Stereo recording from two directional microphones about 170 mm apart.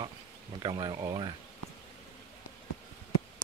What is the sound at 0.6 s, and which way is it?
Speech, 25° right (ahead or behind).